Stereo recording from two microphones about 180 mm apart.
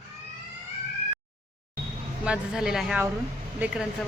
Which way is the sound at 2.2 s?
5° right (ahead or behind).